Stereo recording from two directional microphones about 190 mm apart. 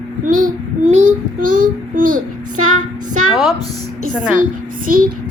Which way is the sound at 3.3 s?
Centre (ahead or behind).